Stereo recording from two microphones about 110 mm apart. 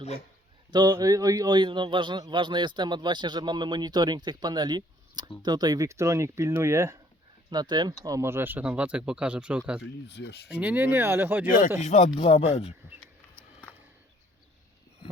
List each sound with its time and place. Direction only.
0.7 s a man's voice: 35° right (ahead or behind)
7.5 s a man's voice: 40° right (ahead or behind)
8.0 s speech: 25° right (ahead or behind)
11.8 s speech: 85° left
12.2 s speech: 65° left (ahead or behind)